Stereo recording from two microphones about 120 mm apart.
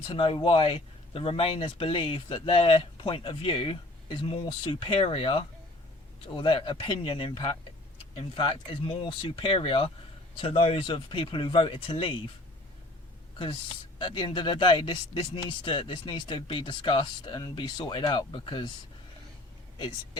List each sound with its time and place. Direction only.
0.1 s speech: 45° left (ahead or behind)
14.0 s speech: 40° left (ahead or behind)